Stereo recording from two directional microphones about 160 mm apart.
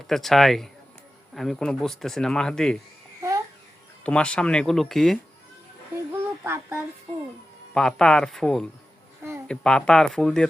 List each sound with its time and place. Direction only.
0.1 s speech: centre (ahead or behind)
3.2 s babbling: 20° right (ahead or behind)
4.0 s speech: 5° left (ahead or behind)
6.4 s child singing: 15° right (ahead or behind)
7.7 s speech: 5° left (ahead or behind)